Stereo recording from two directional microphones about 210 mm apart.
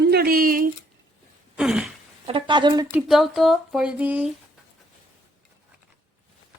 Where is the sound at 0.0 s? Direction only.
50° right (ahead or behind).